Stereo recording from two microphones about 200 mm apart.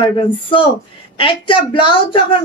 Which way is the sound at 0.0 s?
25° left (ahead or behind).